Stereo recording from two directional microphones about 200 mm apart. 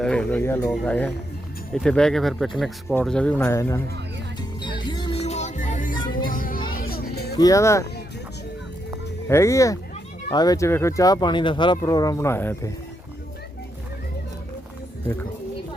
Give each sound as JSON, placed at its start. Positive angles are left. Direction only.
{"t": 0.0, "sound": "speech", "side_deg": 5}
{"t": 4.4, "sound": "music", "side_deg": 20}
{"t": 7.3, "sound": "speech", "side_deg": 15}
{"t": 9.3, "sound": "speech", "side_deg": 15}